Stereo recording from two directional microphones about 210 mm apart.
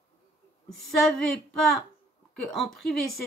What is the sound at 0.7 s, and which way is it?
A woman's voice, centre (ahead or behind).